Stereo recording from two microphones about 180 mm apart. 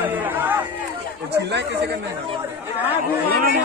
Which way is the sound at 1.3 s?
70° right (ahead or behind).